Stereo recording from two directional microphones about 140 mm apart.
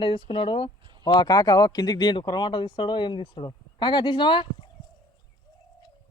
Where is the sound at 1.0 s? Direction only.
30° left (ahead or behind).